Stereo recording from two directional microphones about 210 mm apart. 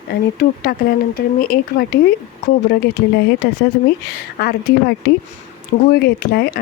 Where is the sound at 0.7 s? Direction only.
45° left (ahead or behind).